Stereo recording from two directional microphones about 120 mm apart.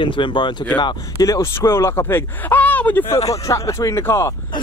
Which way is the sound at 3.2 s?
25° left (ahead or behind).